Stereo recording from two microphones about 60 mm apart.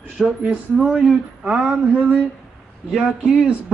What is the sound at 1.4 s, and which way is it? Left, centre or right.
Speech, centre.